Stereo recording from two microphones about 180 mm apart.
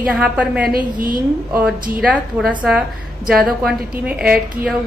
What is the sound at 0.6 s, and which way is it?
Speech, 50° right (ahead or behind).